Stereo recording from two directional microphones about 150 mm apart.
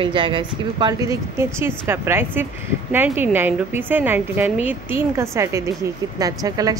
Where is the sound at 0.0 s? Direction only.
35° right (ahead or behind).